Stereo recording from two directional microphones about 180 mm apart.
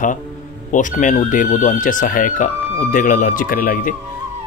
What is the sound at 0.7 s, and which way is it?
Speech, 45° left (ahead or behind).